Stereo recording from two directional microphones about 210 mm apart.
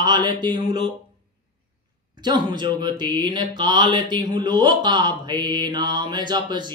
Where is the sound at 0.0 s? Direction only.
20° right (ahead or behind).